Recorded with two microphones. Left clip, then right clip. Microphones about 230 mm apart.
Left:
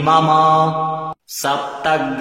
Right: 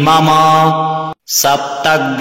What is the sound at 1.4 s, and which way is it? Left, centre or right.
Mantra, right.